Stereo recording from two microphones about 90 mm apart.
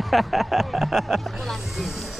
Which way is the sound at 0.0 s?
Centre (ahead or behind).